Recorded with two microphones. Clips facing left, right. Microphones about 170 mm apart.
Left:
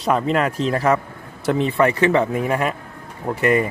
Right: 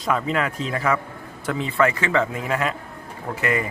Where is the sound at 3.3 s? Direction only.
35° left (ahead or behind).